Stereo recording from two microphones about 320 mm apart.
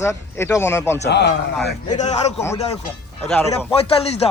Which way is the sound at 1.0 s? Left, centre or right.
Left.